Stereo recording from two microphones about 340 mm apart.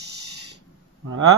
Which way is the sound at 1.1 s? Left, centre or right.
Right.